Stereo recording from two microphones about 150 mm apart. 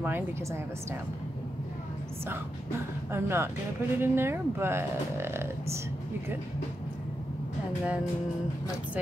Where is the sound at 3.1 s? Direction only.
15° right (ahead or behind).